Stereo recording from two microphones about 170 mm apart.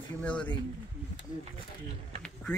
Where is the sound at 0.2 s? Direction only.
5° left (ahead or behind).